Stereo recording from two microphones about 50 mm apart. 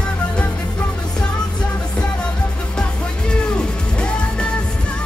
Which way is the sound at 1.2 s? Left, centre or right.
Centre.